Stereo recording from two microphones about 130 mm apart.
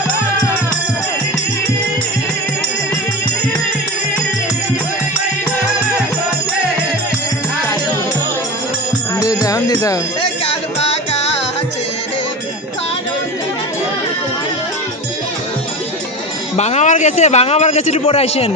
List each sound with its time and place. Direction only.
9.2 s music: 25° left (ahead or behind)
10.2 s music: 40° left (ahead or behind)
16.6 s a man's voice: 60° left (ahead or behind)